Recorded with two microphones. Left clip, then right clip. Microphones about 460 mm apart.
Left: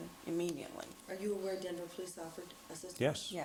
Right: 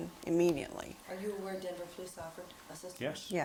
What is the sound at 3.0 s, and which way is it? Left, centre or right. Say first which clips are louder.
Speech: left 5 dB; left.